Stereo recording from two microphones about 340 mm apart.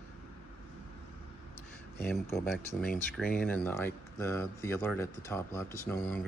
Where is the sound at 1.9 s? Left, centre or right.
Centre.